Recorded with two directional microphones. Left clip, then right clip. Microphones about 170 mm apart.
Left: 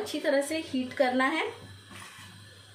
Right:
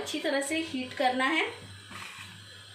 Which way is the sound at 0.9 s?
40° left (ahead or behind).